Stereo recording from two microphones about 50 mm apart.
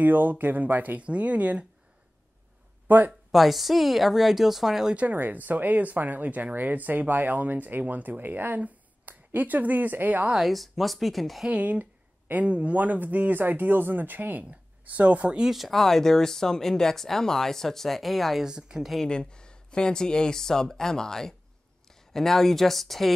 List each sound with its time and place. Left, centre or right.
0.0 s speech: right
3.1 s a woman's voice: centre
4.9 s speech: right
10.4 s a woman's voice: centre
11.6 s speech: right
15.5 s speech: centre
18.4 s speech: centre
19.0 s a woman's voice: centre